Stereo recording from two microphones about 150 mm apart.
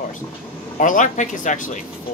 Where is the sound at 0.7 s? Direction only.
60° left (ahead or behind).